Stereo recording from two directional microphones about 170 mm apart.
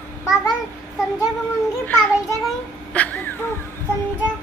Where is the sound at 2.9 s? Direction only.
10° left (ahead or behind).